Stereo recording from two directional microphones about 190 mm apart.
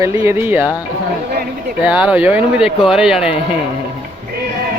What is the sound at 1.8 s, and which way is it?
Speech, 5° right (ahead or behind).